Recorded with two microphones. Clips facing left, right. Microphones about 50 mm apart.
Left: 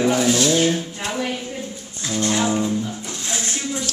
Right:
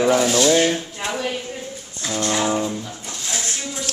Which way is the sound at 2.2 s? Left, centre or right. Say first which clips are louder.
Left 1 dB; centre.